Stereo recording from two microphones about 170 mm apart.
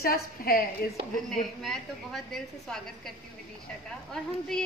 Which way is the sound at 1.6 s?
Centre (ahead or behind).